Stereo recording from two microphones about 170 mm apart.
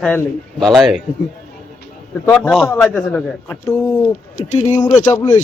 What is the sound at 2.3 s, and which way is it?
Speech, 5° left (ahead or behind).